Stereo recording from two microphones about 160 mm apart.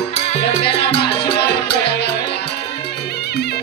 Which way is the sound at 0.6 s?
90° left.